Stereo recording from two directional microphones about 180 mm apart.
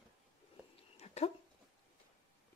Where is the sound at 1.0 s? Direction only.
35° left (ahead or behind).